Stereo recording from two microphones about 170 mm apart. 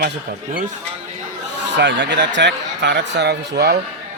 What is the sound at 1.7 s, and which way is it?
Speech, 90° right.